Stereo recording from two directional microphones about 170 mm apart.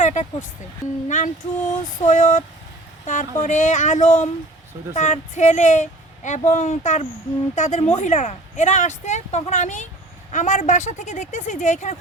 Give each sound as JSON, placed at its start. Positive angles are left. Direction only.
{"t": 0.0, "sound": "vehicle", "side_deg": 45}
{"t": 1.0, "sound": "speech", "side_deg": 45}